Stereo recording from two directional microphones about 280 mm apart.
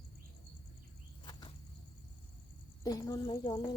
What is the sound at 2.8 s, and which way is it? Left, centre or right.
Speech, centre.